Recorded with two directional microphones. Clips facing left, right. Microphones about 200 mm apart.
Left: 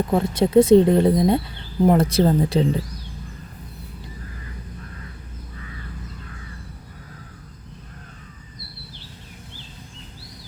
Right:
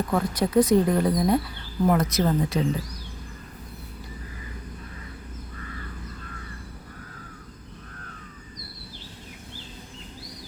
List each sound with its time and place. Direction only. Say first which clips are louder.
0.1 s speech: left 6 dB; 25° left (ahead or behind)